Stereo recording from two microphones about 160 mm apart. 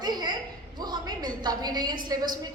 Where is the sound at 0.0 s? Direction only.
25° right (ahead or behind).